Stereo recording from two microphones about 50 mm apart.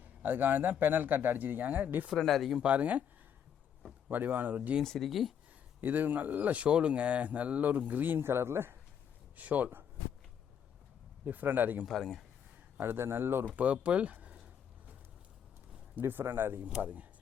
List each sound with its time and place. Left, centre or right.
0.0 s speech: right
2.2 s speech: centre
2.6 s speech: right
4.1 s speech: right
4.8 s speech: centre
5.8 s speech: right
9.3 s speech: right
11.3 s speech: right
11.9 s speech: centre
12.7 s speech: right
13.6 s speech: right
16.0 s speech: right
16.8 s speech: right